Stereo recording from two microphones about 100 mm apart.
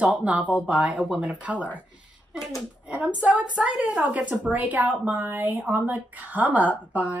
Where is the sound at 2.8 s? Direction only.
10° right (ahead or behind).